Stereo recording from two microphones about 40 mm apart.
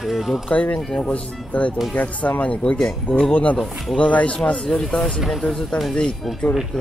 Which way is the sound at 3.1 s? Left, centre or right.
Left.